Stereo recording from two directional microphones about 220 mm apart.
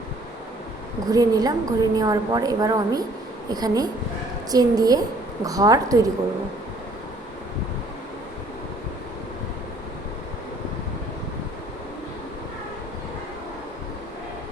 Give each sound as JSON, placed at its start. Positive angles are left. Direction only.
{"t": 1.1, "sound": "a woman's voice", "side_deg": -15}